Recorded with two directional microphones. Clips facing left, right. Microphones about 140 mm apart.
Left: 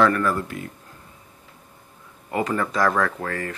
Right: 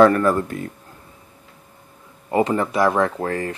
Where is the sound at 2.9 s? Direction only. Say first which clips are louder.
Right 4 dB; 30° right (ahead or behind).